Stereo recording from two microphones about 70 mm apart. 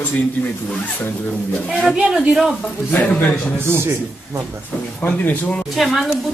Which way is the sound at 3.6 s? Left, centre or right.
Right.